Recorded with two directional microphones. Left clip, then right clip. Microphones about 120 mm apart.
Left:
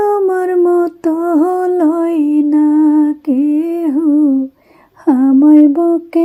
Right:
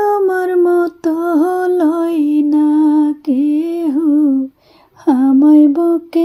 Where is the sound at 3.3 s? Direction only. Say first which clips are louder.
Left 1 dB; 35° right (ahead or behind).